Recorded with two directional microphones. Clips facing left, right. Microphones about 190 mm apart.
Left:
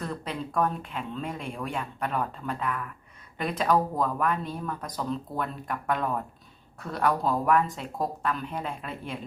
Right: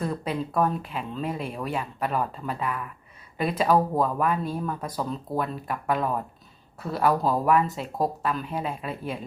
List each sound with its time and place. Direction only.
0.0 s speech: 10° right (ahead or behind)